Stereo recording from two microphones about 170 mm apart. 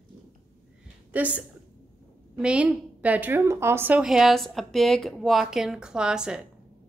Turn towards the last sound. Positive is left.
turn(degrees=-5)  # may be behind; listen again after turning